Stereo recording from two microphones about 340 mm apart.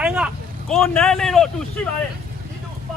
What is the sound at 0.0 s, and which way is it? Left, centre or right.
Vehicle, centre.